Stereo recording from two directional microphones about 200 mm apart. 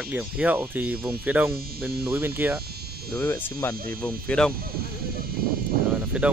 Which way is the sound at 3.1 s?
10° left (ahead or behind).